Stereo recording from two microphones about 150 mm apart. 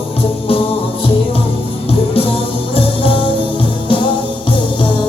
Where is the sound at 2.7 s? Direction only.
40° left (ahead or behind).